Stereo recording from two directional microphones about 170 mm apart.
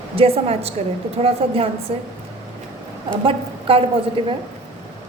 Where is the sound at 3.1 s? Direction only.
30° right (ahead or behind).